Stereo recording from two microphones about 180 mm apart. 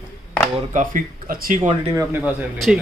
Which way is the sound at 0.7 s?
50° right (ahead or behind).